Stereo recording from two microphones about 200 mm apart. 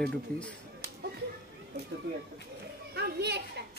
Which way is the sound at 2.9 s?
55° right (ahead or behind).